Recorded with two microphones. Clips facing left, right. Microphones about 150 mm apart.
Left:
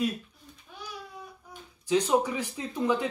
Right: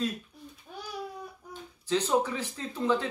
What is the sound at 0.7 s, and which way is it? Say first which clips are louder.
Babbling: right 3 dB; 45° right (ahead or behind).